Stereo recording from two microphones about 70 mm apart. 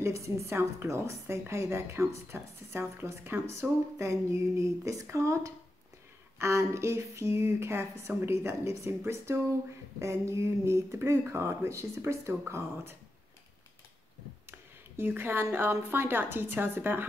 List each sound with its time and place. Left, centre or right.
0.0 s a woman's voice: right
15.0 s speech: right